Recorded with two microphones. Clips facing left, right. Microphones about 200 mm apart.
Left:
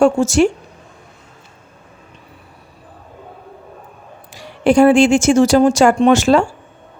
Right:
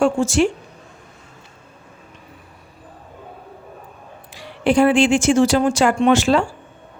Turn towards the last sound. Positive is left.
turn(degrees=45)  # may be behind; listen again after turning